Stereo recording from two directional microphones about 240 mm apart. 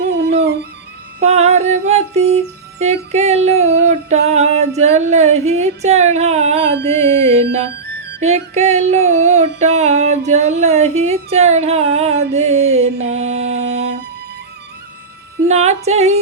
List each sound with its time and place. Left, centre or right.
1.2 s music: right
7.9 s music: right
8.2 s music: right
9.6 s a sound: right
15.4 s music: right